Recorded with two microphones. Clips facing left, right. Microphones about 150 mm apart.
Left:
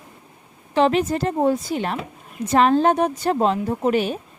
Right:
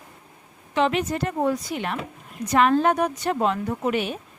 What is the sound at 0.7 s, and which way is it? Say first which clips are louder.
A woman's voice: left 4 dB; 35° left (ahead or behind).